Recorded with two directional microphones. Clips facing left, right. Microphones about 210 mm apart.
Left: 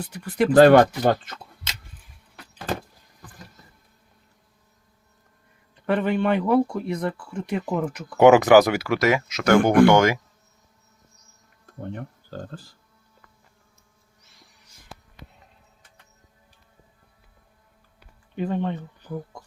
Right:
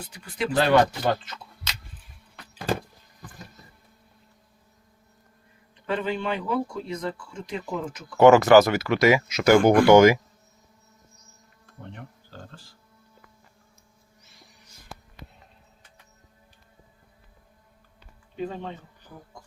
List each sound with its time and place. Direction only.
0.3 s speech: 55° left (ahead or behind)
5.8 s speech: 60° left (ahead or behind)
8.2 s speech: 15° left (ahead or behind)
9.0 s speech: centre (ahead or behind)
11.8 s speech: 45° left (ahead or behind)
18.3 s speech: 65° left (ahead or behind)